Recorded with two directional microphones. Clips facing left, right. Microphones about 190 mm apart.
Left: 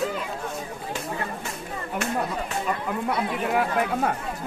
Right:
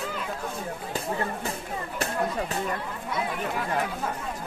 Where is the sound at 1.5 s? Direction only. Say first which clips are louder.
Even; 35° right (ahead or behind).